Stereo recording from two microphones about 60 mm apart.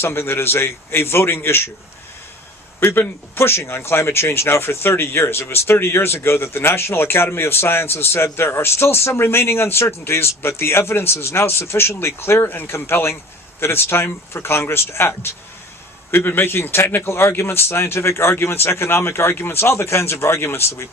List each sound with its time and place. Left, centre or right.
0.0 s speech: left
2.8 s speech: left
12.5 s speech: left